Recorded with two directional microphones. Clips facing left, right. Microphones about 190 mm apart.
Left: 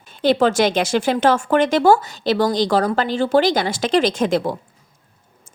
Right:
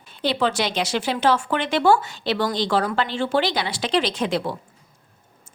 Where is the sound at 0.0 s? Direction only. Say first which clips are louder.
Left 6 dB; 45° left (ahead or behind).